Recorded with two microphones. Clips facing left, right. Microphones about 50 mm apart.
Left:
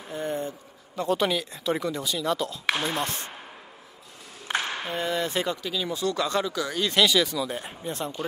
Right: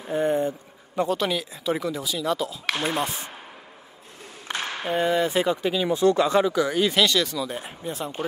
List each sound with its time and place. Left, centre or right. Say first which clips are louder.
0.1 s a sound: right 7 dB; right
1.0 s speech: left 1 dB; centre
4.5 s a sound: left 2 dB; centre
4.8 s speech: right 6 dB; centre
5.6 s speech: right 7 dB; right
6.9 s speech: even; centre